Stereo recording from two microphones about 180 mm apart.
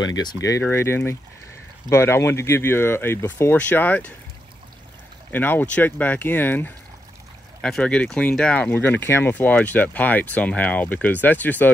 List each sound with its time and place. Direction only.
0.1 s speech: 20° left (ahead or behind)
5.3 s speech: 10° left (ahead or behind)